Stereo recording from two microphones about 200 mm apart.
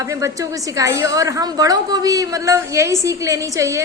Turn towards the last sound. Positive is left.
turn(degrees=-15)  # may be behind; listen again after turning